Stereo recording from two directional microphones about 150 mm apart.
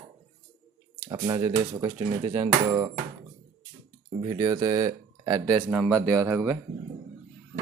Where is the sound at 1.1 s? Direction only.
25° right (ahead or behind).